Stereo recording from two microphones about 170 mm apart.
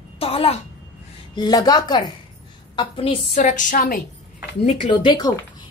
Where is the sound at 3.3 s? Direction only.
50° left (ahead or behind).